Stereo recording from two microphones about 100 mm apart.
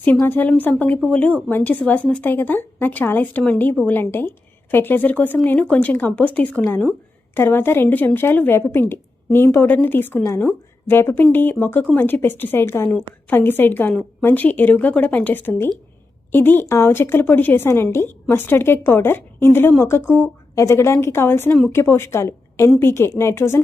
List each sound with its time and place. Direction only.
0.0 s a woman's voice: 20° left (ahead or behind)